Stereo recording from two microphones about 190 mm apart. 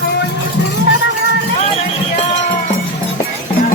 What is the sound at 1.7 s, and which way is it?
Run, 35° left (ahead or behind).